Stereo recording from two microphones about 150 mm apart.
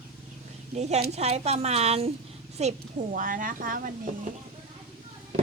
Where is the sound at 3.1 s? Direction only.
65° right (ahead or behind).